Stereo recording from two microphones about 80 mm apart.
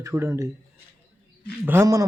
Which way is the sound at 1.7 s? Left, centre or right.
Right.